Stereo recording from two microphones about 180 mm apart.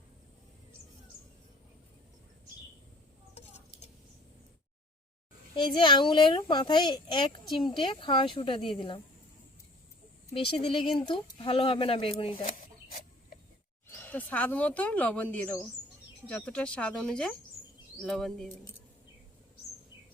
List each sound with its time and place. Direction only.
5.5 s speech: 25° left (ahead or behind)
10.3 s speech: 30° left (ahead or behind)
12.5 s chicken: 45° left (ahead or behind)
13.8 s speech: 10° left (ahead or behind)